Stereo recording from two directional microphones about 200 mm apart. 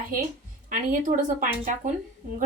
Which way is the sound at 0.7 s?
40° right (ahead or behind).